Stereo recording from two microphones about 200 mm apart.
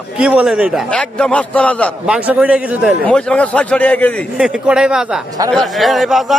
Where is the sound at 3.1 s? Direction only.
5° left (ahead or behind).